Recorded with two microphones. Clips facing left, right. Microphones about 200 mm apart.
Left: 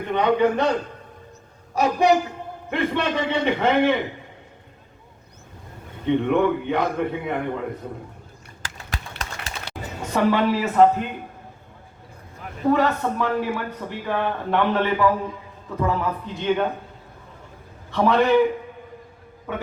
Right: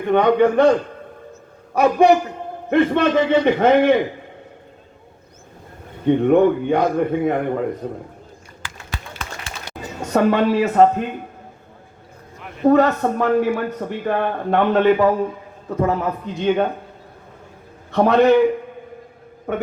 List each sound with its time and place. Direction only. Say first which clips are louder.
0.1 s speech: right 5 dB; 55° right (ahead or behind)
1.7 s a man's voice: right 5 dB; 55° right (ahead or behind)
6.1 s speech: right 5 dB; 45° right (ahead or behind)
7.8 s a man's voice: right 6 dB; 65° right (ahead or behind)
8.6 s a sound: right 1 dB; 45° left (ahead or behind)
10.1 s speech: right 4 dB; 50° right (ahead or behind)
12.6 s speech: right 5 dB; 45° right (ahead or behind)
17.9 s speech: right 5 dB; 50° right (ahead or behind)